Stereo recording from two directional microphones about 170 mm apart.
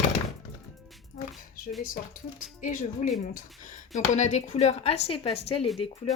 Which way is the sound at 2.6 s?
50° left (ahead or behind).